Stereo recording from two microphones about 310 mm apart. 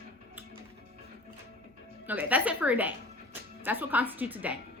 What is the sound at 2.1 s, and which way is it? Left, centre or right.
A woman's voice, centre.